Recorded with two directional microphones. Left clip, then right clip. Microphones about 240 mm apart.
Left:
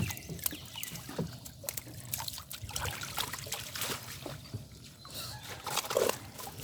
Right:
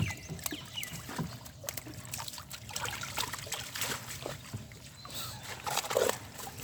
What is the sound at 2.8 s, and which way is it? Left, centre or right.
Trickle, centre.